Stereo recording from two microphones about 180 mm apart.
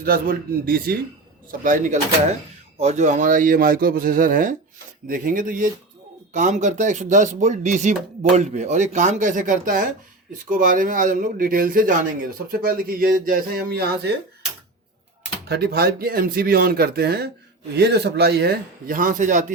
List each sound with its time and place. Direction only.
0.0 s speech: 55° right (ahead or behind)
15.4 s speech: 65° right (ahead or behind); by 19.5 s 45° right (ahead or behind)